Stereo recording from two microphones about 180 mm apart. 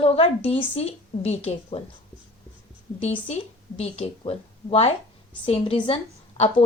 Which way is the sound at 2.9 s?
35° left (ahead or behind).